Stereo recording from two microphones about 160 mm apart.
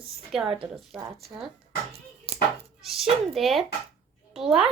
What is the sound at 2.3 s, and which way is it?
Chopping, 40° right (ahead or behind).